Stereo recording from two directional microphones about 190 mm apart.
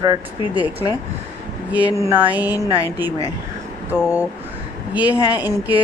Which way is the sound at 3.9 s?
10° right (ahead or behind).